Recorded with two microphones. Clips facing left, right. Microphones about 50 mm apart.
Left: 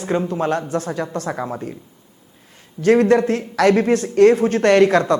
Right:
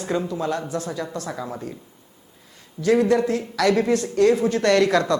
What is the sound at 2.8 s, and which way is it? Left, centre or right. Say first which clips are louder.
Speech: left 4 dB; left.